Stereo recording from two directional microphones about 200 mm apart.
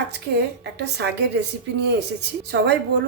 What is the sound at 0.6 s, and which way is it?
A woman's voice, 55° right (ahead or behind).